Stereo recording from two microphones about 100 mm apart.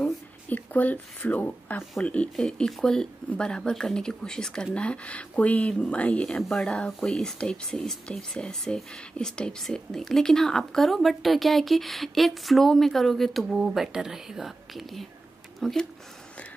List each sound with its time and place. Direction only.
0.0 s speech: 15° left (ahead or behind)